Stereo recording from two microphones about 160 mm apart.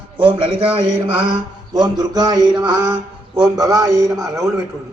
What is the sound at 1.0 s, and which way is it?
Mantra, 30° right (ahead or behind).